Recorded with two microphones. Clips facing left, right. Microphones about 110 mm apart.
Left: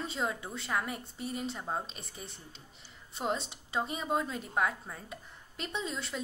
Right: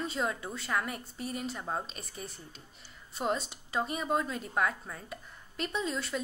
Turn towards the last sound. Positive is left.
turn(degrees=20)  # may be behind; listen again after turning